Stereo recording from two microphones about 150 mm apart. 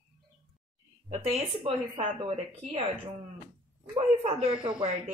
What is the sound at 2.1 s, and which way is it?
Speech, 40° right (ahead or behind).